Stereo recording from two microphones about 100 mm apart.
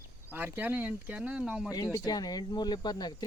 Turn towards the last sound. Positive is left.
turn(degrees=45)  # may be behind; listen again after turning